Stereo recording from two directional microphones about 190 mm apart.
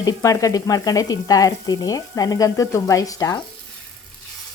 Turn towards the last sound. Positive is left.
turn(degrees=20)  # may be behind; listen again after turning